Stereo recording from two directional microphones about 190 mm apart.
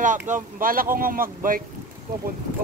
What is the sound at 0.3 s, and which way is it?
Speech, 45° right (ahead or behind).